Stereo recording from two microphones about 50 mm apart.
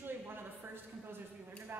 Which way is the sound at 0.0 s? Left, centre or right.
Right.